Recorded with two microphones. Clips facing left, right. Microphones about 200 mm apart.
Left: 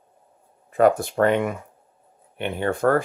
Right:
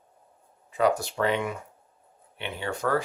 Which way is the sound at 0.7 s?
50° left (ahead or behind).